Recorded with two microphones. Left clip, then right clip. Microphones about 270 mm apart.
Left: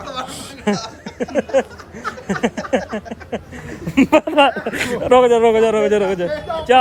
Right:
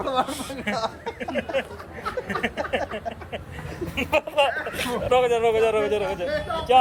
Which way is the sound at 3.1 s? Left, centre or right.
Left.